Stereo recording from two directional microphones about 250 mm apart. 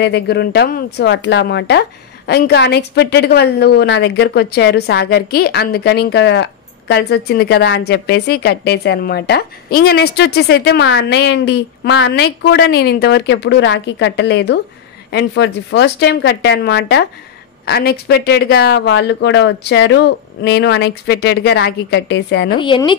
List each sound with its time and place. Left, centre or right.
0.0 s speech: left
22.6 s speech: centre